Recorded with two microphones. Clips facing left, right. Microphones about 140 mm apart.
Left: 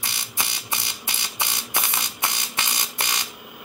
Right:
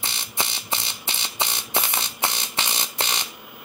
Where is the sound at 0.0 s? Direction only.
25° right (ahead or behind).